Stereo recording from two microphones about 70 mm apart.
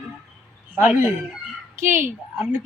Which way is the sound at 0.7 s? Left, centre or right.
Centre.